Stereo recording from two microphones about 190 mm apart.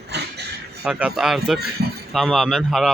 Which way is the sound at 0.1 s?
60° right (ahead or behind).